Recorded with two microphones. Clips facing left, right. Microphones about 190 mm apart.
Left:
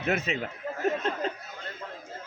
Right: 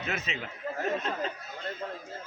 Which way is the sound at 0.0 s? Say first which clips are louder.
Left 7 dB; 50° left (ahead or behind).